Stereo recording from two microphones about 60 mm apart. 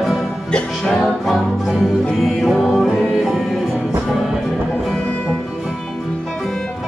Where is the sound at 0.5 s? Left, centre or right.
Centre.